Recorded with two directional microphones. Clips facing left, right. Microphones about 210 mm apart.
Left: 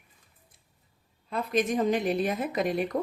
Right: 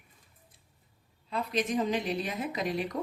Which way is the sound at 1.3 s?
50° left (ahead or behind).